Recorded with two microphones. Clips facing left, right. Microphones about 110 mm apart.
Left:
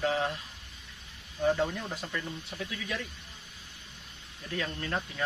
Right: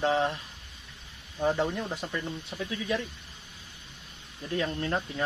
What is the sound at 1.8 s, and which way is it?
Speech, 25° right (ahead or behind).